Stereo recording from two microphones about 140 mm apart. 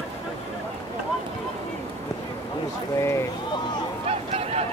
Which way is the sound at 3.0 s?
20° left (ahead or behind).